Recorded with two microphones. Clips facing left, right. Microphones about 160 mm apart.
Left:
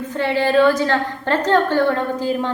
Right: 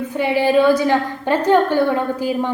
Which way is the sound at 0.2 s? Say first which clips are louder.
Right 1 dB; 10° right (ahead or behind).